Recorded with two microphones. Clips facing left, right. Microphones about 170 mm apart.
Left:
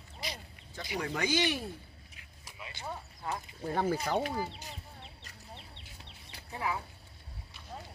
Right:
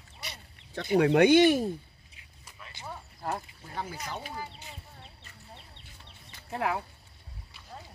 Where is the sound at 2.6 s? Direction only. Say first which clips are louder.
Left 2 dB; 10° left (ahead or behind).